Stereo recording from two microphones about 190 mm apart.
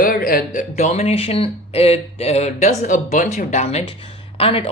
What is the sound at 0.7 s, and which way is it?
Speech, 35° left (ahead or behind).